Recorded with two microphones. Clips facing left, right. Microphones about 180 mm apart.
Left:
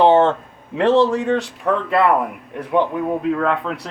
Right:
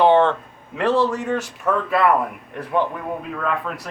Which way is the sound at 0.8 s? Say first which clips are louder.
Left 4 dB; 25° left (ahead or behind).